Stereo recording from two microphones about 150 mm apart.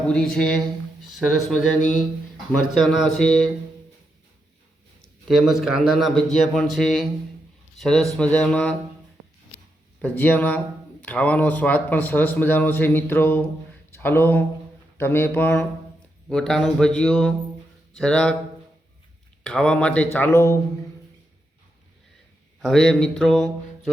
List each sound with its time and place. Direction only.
0.1 s a man's voice: 5° left (ahead or behind)
5.3 s a man's voice: centre (ahead or behind)
10.0 s a man's voice: 10° left (ahead or behind)
19.4 s speech: 5° left (ahead or behind)
22.6 s a man's voice: 5° left (ahead or behind)